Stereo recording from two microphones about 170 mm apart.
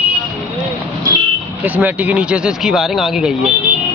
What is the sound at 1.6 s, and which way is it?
Speech, 10° right (ahead or behind).